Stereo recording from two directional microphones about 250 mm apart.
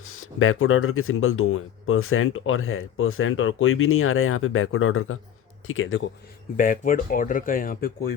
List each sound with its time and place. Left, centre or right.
0.0 s speech: left
6.6 s speech: left